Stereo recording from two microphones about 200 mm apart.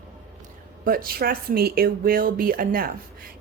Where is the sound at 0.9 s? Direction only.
45° right (ahead or behind).